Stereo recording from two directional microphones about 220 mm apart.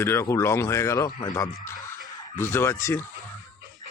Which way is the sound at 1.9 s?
10° left (ahead or behind).